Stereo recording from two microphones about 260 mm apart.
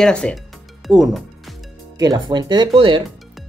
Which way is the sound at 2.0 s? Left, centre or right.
Centre.